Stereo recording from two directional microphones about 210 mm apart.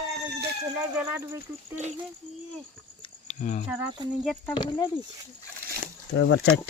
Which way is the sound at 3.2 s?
35° left (ahead or behind).